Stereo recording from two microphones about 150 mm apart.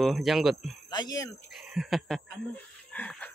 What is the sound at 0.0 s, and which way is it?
Speech, centre (ahead or behind).